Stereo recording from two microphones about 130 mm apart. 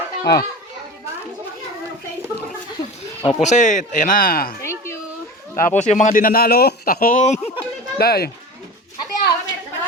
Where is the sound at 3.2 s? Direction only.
65° left (ahead or behind); by 4.3 s 90° left.